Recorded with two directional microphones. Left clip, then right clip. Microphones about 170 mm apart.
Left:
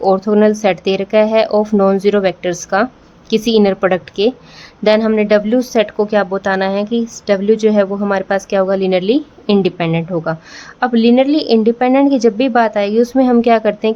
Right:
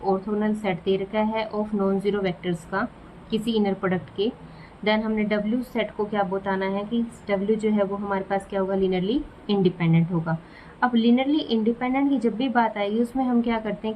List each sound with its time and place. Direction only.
0.0 s speech: 70° left (ahead or behind)